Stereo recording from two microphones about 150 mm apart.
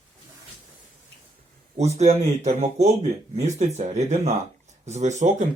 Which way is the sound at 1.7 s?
45° right (ahead or behind).